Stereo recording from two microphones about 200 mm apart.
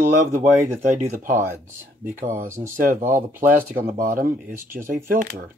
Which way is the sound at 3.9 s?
45° right (ahead or behind).